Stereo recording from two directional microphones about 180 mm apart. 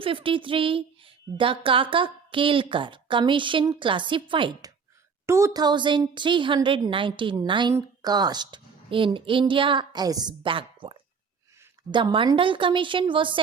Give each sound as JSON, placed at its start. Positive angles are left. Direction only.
{"t": 0.0, "sound": "a woman's voice", "side_deg": -30}
{"t": 5.2, "sound": "a woman's voice", "side_deg": -15}